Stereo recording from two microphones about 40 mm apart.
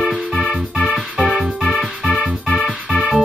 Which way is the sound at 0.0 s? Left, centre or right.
Centre.